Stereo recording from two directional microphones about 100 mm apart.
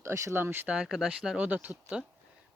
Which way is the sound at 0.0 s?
30° right (ahead or behind).